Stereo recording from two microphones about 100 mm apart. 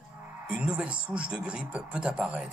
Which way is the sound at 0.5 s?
10° right (ahead or behind).